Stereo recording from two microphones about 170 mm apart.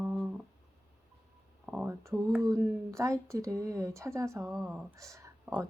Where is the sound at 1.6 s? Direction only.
5° right (ahead or behind).